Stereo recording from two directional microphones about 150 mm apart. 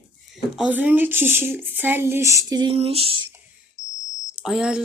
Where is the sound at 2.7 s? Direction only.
40° right (ahead or behind).